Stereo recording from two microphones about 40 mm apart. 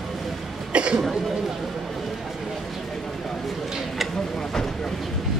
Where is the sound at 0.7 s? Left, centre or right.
Right.